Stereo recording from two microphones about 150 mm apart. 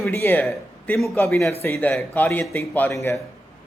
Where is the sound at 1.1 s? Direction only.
15° left (ahead or behind).